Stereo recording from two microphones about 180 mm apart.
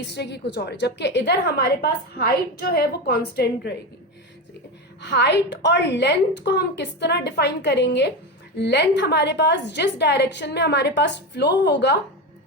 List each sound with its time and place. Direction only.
0.1 s a woman's voice: 70° left (ahead or behind)
4.9 s a woman's voice: 70° left (ahead or behind)